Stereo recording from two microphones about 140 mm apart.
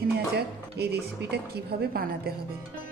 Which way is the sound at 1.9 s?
90° right.